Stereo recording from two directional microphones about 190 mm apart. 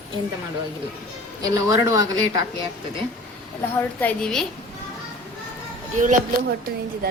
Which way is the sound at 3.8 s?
5° left (ahead or behind).